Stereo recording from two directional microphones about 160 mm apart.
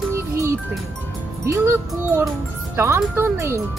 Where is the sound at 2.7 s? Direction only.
15° right (ahead or behind).